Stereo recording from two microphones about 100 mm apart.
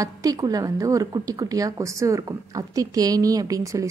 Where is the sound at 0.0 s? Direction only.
35° right (ahead or behind).